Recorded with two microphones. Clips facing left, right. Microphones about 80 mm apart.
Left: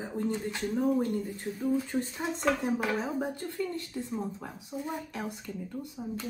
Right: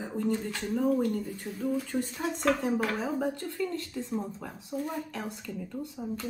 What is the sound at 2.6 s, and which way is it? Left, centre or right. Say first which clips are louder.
Speech: right 1 dB; centre.